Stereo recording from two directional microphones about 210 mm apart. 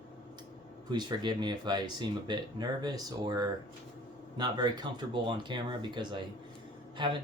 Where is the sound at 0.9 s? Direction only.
20° right (ahead or behind).